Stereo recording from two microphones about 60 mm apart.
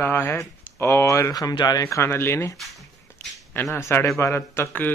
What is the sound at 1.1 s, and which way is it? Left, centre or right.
Speech, left.